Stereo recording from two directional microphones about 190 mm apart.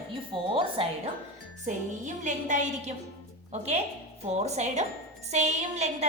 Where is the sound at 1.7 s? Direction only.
40° right (ahead or behind).